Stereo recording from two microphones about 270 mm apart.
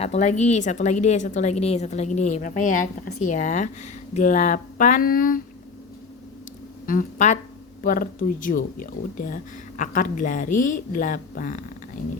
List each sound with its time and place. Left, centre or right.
0.0 s speech: left
6.8 s speech: left
10.5 s speech: left
10.9 s speech: left